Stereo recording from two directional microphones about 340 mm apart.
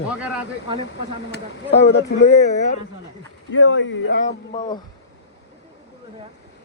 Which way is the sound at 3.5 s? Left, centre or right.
Left.